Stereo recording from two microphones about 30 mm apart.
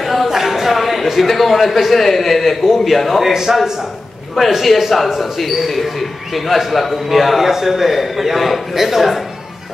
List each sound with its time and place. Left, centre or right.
0.0 s a sound: centre
0.3 s a man's voice: centre
3.3 s a man's voice: centre